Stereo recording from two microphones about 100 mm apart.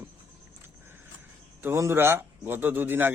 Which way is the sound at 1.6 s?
25° right (ahead or behind).